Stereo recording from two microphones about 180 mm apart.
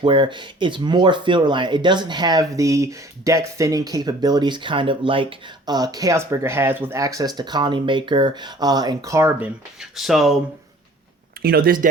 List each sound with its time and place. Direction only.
0.0 s speech: 25° right (ahead or behind)
9.9 s speech: centre (ahead or behind)
11.4 s speech: 55° right (ahead or behind)